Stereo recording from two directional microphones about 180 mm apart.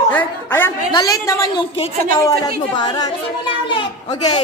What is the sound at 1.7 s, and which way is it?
Speech, 30° left (ahead or behind).